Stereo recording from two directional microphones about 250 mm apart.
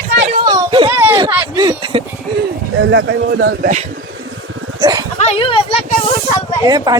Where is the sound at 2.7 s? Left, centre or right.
Right.